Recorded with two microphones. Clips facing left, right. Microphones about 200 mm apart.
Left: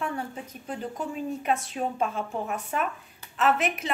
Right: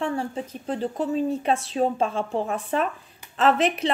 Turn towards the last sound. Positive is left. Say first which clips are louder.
# right 5 dB
turn(degrees=-30)  # may be behind; listen again after turning